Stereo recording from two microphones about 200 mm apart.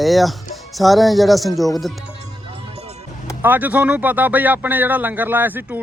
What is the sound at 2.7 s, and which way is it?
Music, 30° right (ahead or behind).